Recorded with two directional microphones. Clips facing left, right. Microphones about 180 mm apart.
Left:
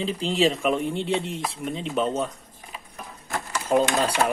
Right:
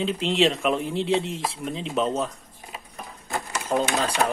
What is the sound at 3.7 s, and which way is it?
Speech, 10° left (ahead or behind).